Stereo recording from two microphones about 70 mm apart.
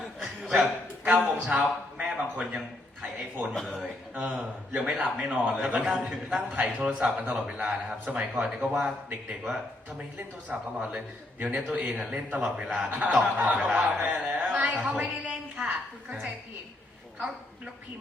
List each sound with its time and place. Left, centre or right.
0.5 s a man's voice: centre
3.5 s a man's voice: centre
3.8 s a man's voice: centre
10.5 s a man's voice: centre